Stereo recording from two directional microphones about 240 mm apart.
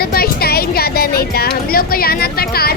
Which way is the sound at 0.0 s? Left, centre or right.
Left.